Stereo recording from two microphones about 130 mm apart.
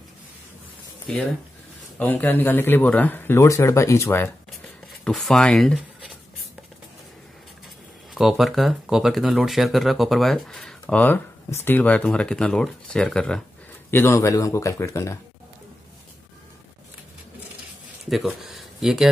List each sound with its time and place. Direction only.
1.0 s speech: 5° left (ahead or behind); by 4.3 s 20° left (ahead or behind)
5.0 s speech: 5° left (ahead or behind)
8.1 s speech: centre (ahead or behind)
13.8 s speech: 20° left (ahead or behind)
18.1 s speech: centre (ahead or behind)